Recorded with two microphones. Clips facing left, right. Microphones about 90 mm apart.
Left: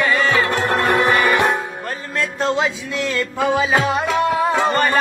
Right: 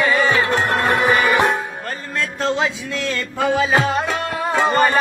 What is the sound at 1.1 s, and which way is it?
Music, centre (ahead or behind).